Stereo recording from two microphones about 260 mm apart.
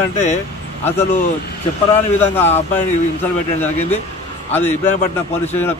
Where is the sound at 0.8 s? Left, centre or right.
Centre.